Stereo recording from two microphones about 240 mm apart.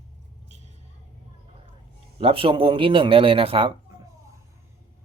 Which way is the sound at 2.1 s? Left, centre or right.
Right.